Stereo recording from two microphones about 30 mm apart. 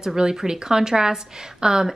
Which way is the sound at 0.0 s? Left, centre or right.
Right.